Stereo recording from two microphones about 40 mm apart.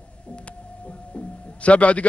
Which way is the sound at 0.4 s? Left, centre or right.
Left.